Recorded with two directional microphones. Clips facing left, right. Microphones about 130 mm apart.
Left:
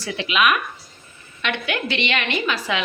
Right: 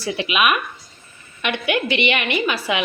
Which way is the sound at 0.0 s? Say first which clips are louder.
Right 1 dB; 10° right (ahead or behind).